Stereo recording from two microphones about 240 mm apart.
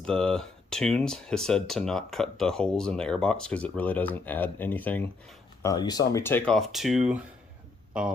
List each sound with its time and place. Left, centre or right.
0.0 s speech: centre